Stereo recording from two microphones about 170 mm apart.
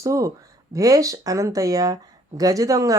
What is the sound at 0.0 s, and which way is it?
Speech, 20° right (ahead or behind).